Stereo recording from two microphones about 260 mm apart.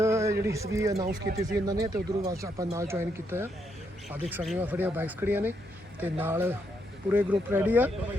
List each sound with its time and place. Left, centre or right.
0.0 s a sound: centre
0.4 s speech: centre
1.0 s speech: right
1.5 s speech: centre